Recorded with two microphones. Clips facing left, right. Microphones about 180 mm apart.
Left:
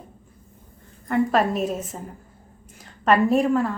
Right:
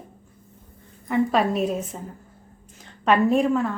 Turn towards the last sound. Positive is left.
turn(degrees=0)  # may be behind; listen again after turning